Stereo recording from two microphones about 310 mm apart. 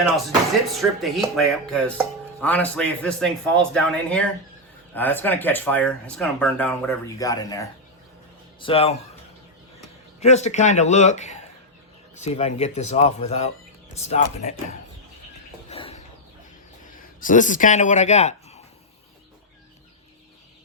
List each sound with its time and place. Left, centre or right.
0.7 s speech: centre
8.6 s speech: centre
10.2 s speech: left
15.7 s a sound: centre
16.9 s speech: left